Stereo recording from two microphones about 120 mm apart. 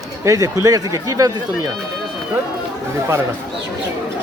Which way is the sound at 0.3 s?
30° right (ahead or behind).